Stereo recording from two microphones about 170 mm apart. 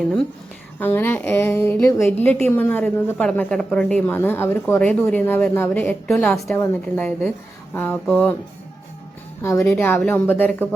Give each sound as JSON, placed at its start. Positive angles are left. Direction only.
{"t": 0.8, "sound": "a woman's voice", "side_deg": 10}
{"t": 9.4, "sound": "a woman's voice", "side_deg": 15}